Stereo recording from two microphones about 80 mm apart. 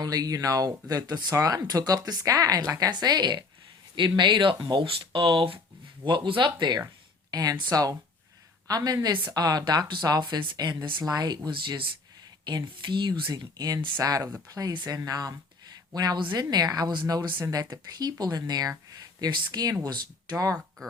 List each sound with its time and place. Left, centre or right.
0.0 s speech: right
4.2 s speech: right
7.3 s speech: right
11.0 s speech: right
12.5 s speech: right
13.4 s speech: right
14.7 s speech: right
14.9 s speech: right
17.1 s speech: right
17.4 s speech: right
20.3 s speech: right